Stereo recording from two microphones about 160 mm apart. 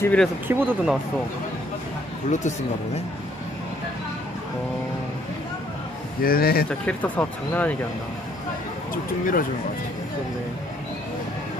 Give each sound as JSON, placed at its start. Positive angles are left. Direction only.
{"t": 0.0, "sound": "speech", "side_deg": 10}
{"t": 0.5, "sound": "speech", "side_deg": -15}
{"t": 2.3, "sound": "speech", "side_deg": 50}
{"t": 6.2, "sound": "speech", "side_deg": 70}
{"t": 6.7, "sound": "speech", "side_deg": 10}
{"t": 8.9, "sound": "speech", "side_deg": 60}